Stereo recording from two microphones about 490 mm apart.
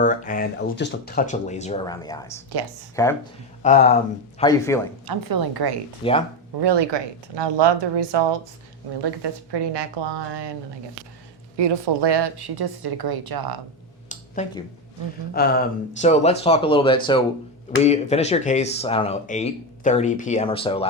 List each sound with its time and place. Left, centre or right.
0.0 s speech: centre
3.6 s speech: centre
5.0 s a woman's voice: right
6.0 s speech: centre
6.6 s a woman's voice: right
11.5 s a woman's voice: right
14.1 s a sound: centre
15.3 s speech: centre